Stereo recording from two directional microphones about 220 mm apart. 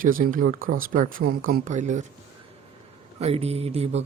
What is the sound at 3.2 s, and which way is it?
Mantra, 30° right (ahead or behind).